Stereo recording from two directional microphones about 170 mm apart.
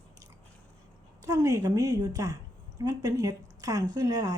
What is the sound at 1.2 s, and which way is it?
A woman's voice, 20° right (ahead or behind).